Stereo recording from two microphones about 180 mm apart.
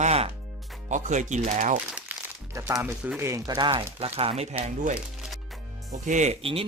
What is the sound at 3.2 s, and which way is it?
Speech, 15° right (ahead or behind).